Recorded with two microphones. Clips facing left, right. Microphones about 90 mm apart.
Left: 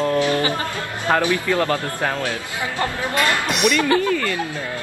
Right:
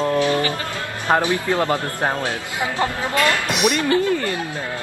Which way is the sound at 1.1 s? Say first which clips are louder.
Even; 20° right (ahead or behind).